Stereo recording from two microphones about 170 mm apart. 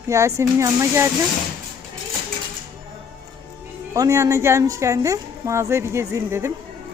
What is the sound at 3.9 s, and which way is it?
A woman's voice, 20° right (ahead or behind).